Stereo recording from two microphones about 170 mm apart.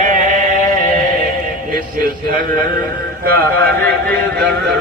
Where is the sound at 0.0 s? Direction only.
50° right (ahead or behind).